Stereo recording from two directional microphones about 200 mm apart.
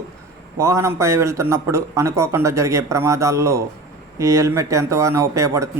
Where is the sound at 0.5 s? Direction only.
15° right (ahead or behind).